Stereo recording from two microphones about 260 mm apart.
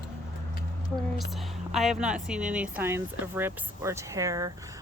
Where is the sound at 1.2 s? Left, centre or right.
Centre.